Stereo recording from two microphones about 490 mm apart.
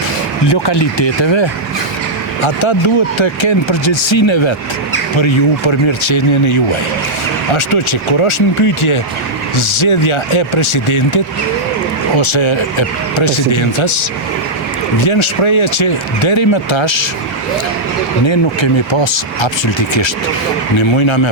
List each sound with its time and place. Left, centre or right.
0.4 s speech: left
8.2 s speech: left
18.3 s speech: left